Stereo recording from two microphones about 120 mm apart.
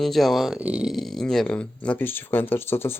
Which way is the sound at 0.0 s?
Centre (ahead or behind).